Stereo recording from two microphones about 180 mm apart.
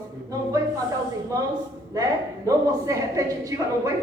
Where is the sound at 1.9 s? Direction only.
20° right (ahead or behind).